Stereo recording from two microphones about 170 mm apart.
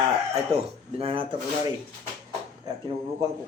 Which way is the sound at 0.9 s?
35° right (ahead or behind).